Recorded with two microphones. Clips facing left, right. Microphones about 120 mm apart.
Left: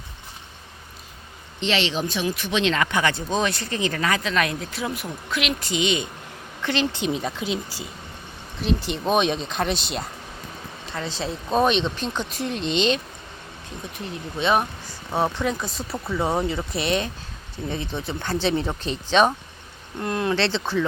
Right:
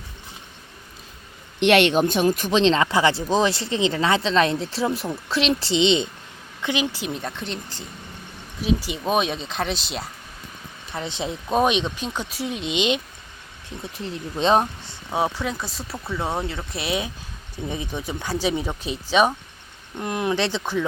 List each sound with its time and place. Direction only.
1.5 s speech: 60° right (ahead or behind); by 6.1 s 25° right (ahead or behind)
6.6 s speech: 15° right (ahead or behind); by 7.9 s 5° left (ahead or behind)
8.6 s speech: 5° right (ahead or behind)
10.9 s speech: 20° right (ahead or behind)
14.3 s speech: 35° right (ahead or behind)
15.1 s speech: 10° right (ahead or behind)